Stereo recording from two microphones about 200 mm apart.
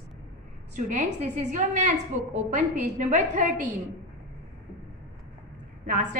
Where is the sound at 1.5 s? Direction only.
35° right (ahead or behind).